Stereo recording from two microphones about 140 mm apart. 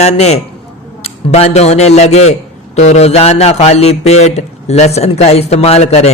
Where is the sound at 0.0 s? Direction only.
50° left (ahead or behind).